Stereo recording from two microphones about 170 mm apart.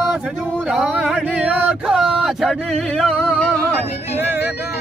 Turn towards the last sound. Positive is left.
turn(degrees=5)  # may be behind; listen again after turning